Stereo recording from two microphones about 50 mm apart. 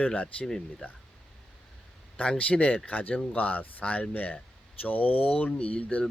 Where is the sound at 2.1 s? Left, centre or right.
Left.